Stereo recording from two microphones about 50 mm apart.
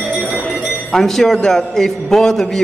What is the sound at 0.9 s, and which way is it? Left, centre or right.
A man's voice, centre.